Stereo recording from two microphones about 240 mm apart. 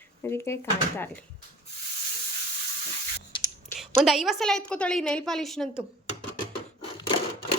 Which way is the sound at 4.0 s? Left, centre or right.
Centre.